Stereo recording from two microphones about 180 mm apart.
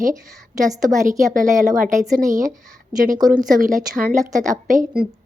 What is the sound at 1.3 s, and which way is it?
Speech, 50° right (ahead or behind).